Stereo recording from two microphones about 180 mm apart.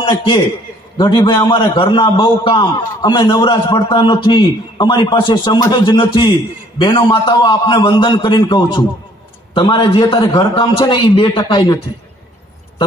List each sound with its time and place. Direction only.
0.0 s a man's voice: 25° left (ahead or behind)